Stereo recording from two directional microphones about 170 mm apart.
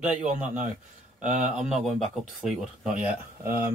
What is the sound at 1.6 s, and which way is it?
Speech, 5° right (ahead or behind).